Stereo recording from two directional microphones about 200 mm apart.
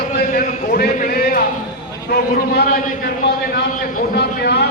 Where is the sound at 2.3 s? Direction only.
45° left (ahead or behind).